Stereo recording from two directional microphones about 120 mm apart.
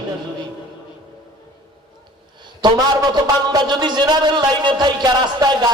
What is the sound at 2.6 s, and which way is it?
A man's voice, 40° right (ahead or behind).